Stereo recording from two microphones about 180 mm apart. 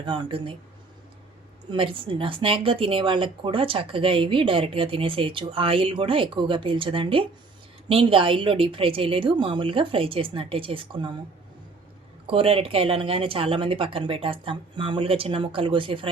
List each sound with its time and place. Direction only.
0.0 s speech: 25° right (ahead or behind)
1.7 s speech: 30° right (ahead or behind)
12.3 s speech: 30° right (ahead or behind)